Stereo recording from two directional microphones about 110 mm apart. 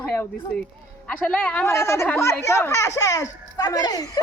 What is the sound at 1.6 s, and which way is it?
Speech, 25° left (ahead or behind).